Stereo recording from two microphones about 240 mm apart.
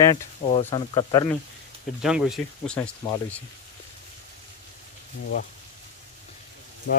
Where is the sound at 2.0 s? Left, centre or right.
Centre.